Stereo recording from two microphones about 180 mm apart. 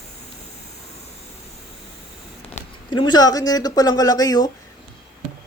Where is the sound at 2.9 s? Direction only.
25° left (ahead or behind).